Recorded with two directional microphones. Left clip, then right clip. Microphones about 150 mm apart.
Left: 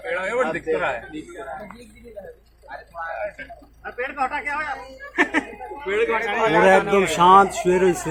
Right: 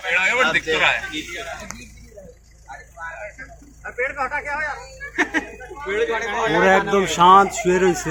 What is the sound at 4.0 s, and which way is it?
Speech, 80° left.